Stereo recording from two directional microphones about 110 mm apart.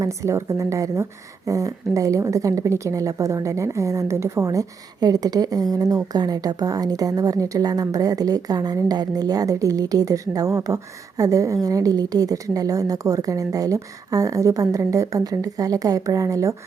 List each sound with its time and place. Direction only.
0.0 s a woman's voice: 30° right (ahead or behind)